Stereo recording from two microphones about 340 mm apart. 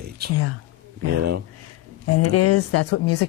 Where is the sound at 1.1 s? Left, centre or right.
Right.